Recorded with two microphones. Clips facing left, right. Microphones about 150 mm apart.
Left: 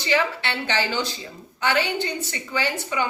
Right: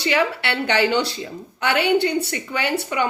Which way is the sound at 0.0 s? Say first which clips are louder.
Right 3 dB; 65° right (ahead or behind).